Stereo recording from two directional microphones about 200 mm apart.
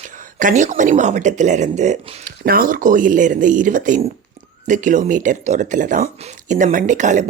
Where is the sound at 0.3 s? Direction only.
40° right (ahead or behind).